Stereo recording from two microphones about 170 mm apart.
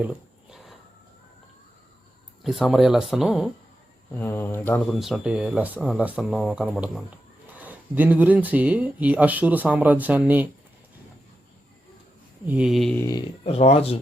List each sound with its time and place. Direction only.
0.0 s a sound: 5° right (ahead or behind)
2.4 s speech: centre (ahead or behind)
4.1 s speech: 15° left (ahead or behind)
4.9 s speech: centre (ahead or behind)
12.5 s speech: 5° right (ahead or behind)
13.0 s speech: 20° left (ahead or behind)
13.4 s speech: 35° left (ahead or behind)